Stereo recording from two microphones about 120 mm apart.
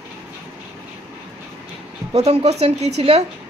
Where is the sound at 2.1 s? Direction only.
60° right (ahead or behind).